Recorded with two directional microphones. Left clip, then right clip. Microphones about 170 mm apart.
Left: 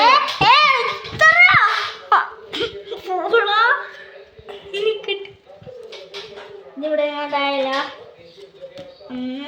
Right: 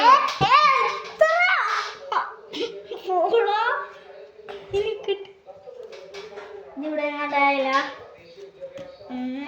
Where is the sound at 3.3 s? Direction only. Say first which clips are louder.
Left 6 dB; 5° left (ahead or behind).